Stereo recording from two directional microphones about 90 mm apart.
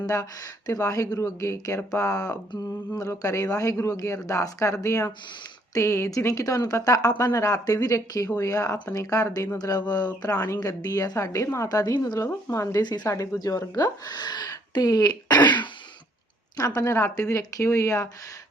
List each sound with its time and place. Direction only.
0.0 s speech: 35° left (ahead or behind)
12.2 s speech: 35° left (ahead or behind)
12.8 s speech: 50° left (ahead or behind)
16.6 s speech: 35° left (ahead or behind)